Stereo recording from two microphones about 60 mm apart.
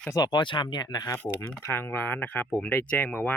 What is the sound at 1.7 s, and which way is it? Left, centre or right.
Speech, left.